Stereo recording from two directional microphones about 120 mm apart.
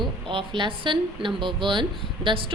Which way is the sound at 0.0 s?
45° right (ahead or behind).